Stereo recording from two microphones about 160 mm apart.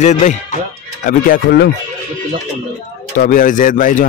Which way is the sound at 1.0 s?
60° left (ahead or behind).